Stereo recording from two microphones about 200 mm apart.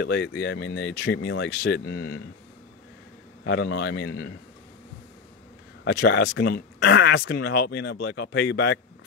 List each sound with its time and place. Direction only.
0.0 s speech: 55° left (ahead or behind)
3.4 s speech: 55° left (ahead or behind)
5.9 s speech: 55° left (ahead or behind)